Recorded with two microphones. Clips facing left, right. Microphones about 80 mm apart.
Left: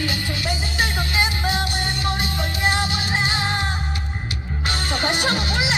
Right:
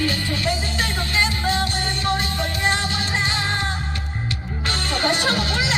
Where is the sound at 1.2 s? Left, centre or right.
Centre.